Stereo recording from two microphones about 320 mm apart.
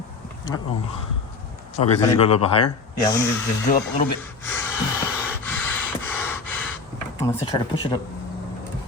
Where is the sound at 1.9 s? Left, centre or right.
Centre.